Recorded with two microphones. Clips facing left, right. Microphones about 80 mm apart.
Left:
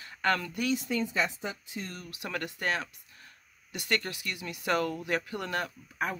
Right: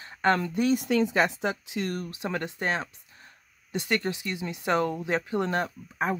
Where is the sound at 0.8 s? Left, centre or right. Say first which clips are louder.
Right 7 dB; right.